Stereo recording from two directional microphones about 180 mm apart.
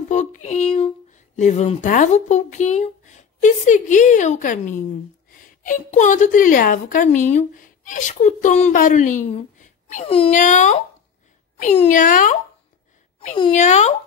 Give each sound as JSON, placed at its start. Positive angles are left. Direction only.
{"t": 0.1, "sound": "a sound", "side_deg": 40}
{"t": 0.7, "sound": "a woman's voice", "side_deg": 40}
{"t": 10.3, "sound": "a woman's voice", "side_deg": 45}